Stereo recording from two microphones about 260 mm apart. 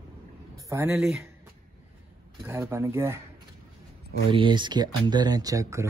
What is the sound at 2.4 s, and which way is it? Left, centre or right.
Speech, centre.